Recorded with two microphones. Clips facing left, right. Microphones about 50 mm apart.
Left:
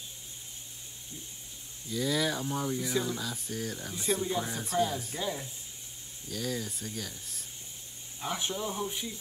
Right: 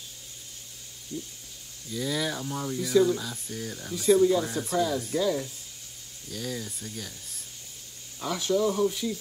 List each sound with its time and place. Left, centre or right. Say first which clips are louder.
1.1 s speech: right 12 dB; left
1.9 s speech: even; centre
4.3 s speech: right 6 dB; centre
6.3 s speech: even; centre
8.2 s speech: right 8 dB; left